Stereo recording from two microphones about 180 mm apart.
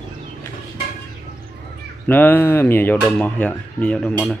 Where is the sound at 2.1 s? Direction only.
10° left (ahead or behind).